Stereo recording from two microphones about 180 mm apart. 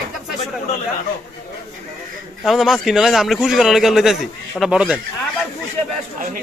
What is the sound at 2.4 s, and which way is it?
A man's voice, centre (ahead or behind).